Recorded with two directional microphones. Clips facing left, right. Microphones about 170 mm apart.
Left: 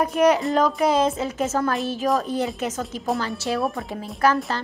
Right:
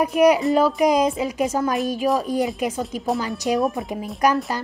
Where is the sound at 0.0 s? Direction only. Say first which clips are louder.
Right 2 dB; 10° right (ahead or behind).